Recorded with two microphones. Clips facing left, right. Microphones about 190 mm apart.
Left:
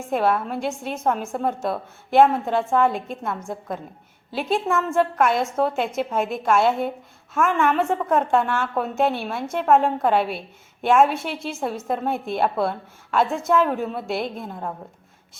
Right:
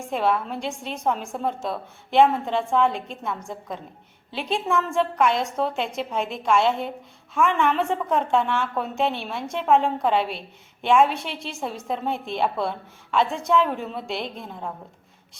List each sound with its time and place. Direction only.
0.1 s a woman's voice: 5° left (ahead or behind)